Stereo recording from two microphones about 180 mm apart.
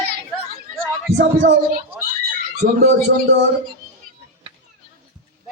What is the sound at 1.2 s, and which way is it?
Speech, 70° right (ahead or behind).